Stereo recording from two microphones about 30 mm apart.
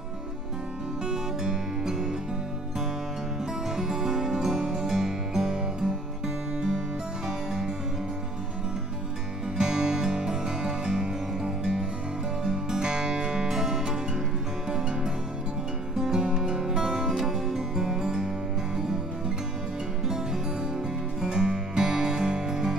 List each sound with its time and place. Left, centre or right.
1.4 s music: centre
3.7 s music: right
4.8 s music: centre
5.5 s music: right
7.2 s music: right
9.6 s music: right
16.6 s music: centre
21.3 s music: right